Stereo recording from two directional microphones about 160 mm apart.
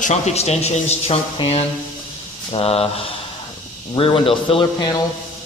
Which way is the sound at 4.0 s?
35° left (ahead or behind).